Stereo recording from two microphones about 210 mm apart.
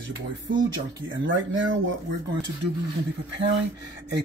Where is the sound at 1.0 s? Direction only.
65° right (ahead or behind).